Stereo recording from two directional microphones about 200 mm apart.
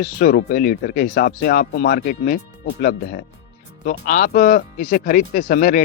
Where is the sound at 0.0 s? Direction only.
45° left (ahead or behind).